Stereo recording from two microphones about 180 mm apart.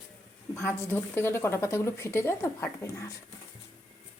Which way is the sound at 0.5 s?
15° left (ahead or behind).